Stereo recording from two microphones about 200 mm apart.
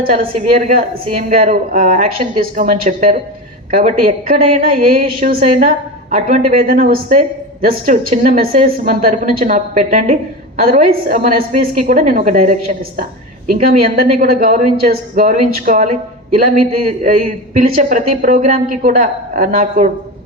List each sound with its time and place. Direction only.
0.0 s a woman's voice: 45° right (ahead or behind)
10.6 s a woman's voice: 45° right (ahead or behind)